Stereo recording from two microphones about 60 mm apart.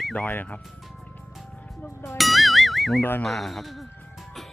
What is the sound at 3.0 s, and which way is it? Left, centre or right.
Speech, left.